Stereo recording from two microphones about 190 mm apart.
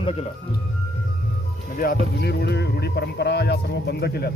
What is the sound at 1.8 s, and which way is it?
Speech, 55° left (ahead or behind).